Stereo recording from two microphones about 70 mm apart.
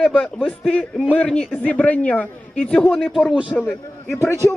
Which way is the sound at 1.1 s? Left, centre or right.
Centre.